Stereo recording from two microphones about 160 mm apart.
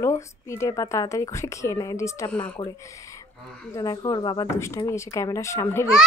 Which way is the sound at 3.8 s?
25° left (ahead or behind).